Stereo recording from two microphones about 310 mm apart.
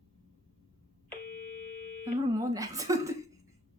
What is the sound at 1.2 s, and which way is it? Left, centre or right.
Tuning fork, left.